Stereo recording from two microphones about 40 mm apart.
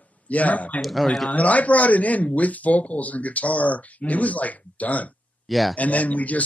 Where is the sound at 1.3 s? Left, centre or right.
Left.